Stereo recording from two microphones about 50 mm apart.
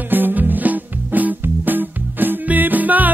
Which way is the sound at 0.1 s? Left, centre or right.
Right.